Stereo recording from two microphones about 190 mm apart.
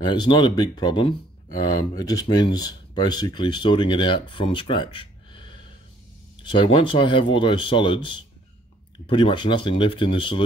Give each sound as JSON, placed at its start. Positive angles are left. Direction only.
{"t": 0.0, "sound": "speech", "side_deg": 25}